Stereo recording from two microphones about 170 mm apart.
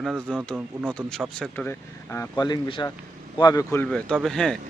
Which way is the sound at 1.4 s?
10° left (ahead or behind).